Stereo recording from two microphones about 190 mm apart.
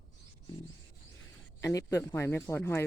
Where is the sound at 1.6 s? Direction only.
15° left (ahead or behind).